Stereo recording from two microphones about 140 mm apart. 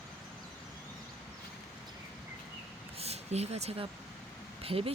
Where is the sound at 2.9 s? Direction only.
50° right (ahead or behind).